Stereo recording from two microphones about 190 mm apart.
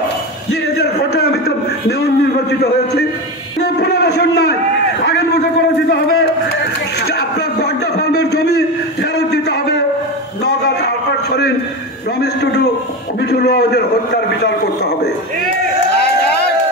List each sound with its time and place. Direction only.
0.7 s a man's voice: 55° left (ahead or behind)
5.9 s a man's voice: 55° left (ahead or behind)
7.1 s a sound: 60° left (ahead or behind)
13.2 s a man's voice: 60° left (ahead or behind)